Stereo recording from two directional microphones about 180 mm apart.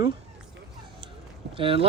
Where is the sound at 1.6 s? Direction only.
30° right (ahead or behind).